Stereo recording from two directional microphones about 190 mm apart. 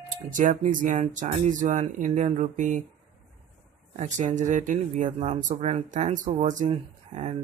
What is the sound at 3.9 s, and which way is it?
Speech, 40° right (ahead or behind).